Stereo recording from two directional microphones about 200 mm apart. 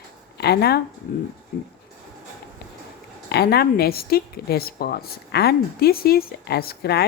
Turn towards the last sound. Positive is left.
turn(degrees=55)  # may be behind; listen again after turning